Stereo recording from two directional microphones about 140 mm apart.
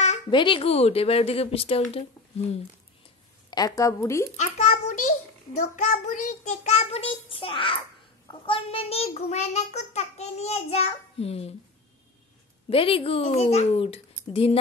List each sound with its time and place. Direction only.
0.3 s a child's voice: 35° left (ahead or behind)
3.4 s a woman's voice: 25° left (ahead or behind)
4.4 s a child's voice: 60° left (ahead or behind); by 11.5 s 45° left (ahead or behind)
12.6 s a child's voice: 40° left (ahead or behind)